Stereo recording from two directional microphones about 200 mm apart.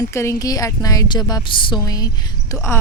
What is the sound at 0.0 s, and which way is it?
A woman's voice, 15° left (ahead or behind).